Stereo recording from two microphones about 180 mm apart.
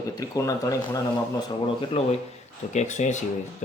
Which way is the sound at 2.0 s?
35° left (ahead or behind).